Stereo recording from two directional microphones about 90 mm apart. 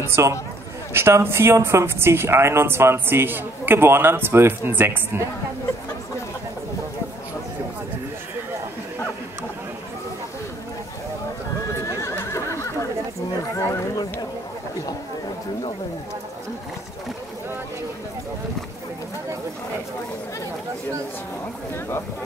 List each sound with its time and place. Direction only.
0.0 s speech: 30° right (ahead or behind)
11.8 s neigh: 35° left (ahead or behind)
13.4 s a sound: 35° left (ahead or behind)